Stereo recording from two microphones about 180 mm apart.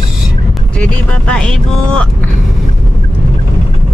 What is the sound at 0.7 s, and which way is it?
Speech, 5° left (ahead or behind).